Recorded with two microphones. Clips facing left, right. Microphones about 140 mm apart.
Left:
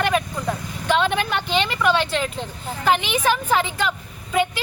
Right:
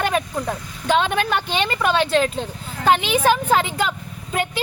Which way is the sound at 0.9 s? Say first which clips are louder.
Right 1 dB; 45° right (ahead or behind).